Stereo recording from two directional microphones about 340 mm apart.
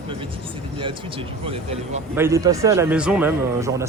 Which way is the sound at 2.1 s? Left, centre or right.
Centre.